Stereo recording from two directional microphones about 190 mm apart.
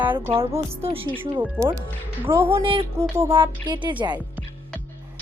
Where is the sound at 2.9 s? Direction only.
15° right (ahead or behind).